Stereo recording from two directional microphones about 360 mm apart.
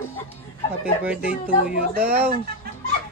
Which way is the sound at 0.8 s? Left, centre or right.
Centre.